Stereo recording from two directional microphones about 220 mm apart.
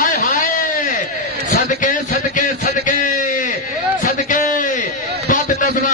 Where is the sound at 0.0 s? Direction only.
40° left (ahead or behind).